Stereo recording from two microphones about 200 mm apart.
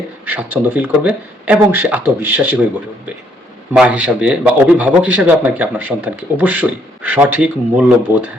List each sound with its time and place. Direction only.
0.3 s a man's voice: 10° right (ahead or behind)
3.7 s a man's voice: 5° right (ahead or behind)